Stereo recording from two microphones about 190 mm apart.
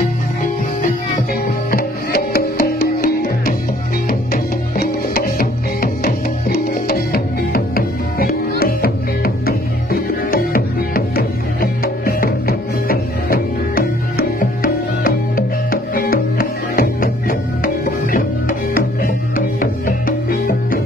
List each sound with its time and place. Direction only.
1.7 s music: 50° left (ahead or behind)